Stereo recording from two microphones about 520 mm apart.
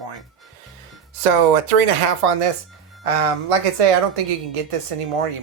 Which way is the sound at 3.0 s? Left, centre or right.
Right.